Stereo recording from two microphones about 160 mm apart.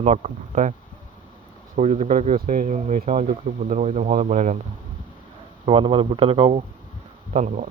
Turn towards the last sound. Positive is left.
turn(degrees=-50)  # may be behind; listen again after turning